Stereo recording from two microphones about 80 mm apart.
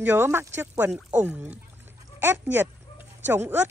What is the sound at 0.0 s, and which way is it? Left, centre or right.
A woman's voice, right.